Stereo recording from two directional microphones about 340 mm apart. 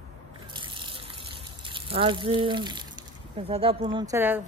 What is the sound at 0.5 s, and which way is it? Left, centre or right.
Water, centre.